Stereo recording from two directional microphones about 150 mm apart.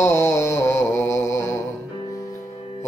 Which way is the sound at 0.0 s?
20° left (ahead or behind).